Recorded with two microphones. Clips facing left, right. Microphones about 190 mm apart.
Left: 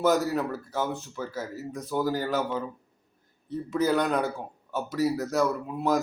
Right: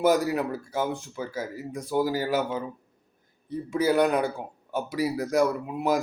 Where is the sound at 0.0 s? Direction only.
10° right (ahead or behind).